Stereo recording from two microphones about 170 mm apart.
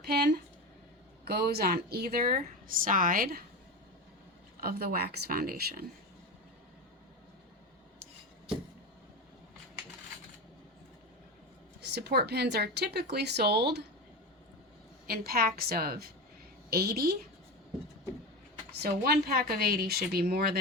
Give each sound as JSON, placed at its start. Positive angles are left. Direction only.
{"t": 0.1, "sound": "a woman's voice", "side_deg": -75}
{"t": 4.6, "sound": "a woman's voice", "side_deg": -65}
{"t": 11.8, "sound": "speech", "side_deg": -75}
{"t": 15.0, "sound": "a woman's voice", "side_deg": -65}
{"t": 18.8, "sound": "a woman's voice", "side_deg": -70}